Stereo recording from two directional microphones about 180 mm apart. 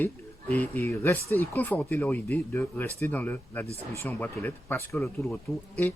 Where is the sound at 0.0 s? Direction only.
10° left (ahead or behind).